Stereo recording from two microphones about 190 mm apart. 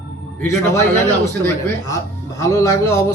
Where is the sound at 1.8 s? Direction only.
15° left (ahead or behind).